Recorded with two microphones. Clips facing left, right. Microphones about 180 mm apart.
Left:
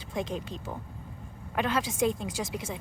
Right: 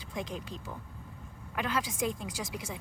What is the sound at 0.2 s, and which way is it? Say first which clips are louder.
Speech: left 5 dB; 25° left (ahead or behind).